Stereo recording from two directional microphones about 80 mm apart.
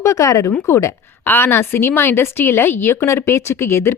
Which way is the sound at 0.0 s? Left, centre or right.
Left.